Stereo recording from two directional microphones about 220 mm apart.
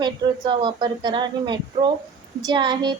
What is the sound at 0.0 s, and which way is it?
A woman's voice, 20° right (ahead or behind).